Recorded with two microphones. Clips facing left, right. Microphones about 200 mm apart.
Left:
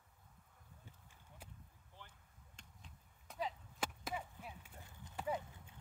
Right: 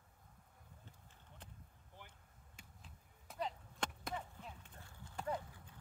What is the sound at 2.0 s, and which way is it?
Basketball bounce, 15° right (ahead or behind).